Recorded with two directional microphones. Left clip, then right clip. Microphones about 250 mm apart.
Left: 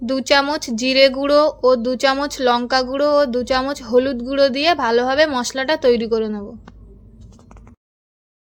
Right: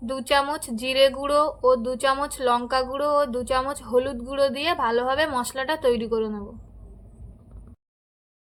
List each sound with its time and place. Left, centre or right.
0.0 s a woman's voice: left